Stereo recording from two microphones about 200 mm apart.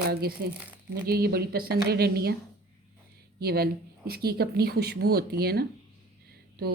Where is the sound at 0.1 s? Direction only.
50° right (ahead or behind).